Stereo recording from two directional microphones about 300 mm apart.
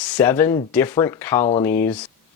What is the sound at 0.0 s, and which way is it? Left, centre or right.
Speech, centre.